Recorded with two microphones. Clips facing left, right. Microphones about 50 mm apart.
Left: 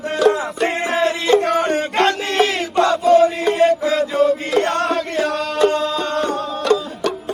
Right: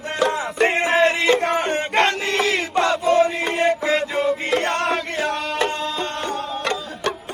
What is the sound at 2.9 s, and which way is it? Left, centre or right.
Chant, right.